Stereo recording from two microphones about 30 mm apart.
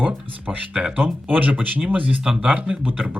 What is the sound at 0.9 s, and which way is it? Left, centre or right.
Speech, right.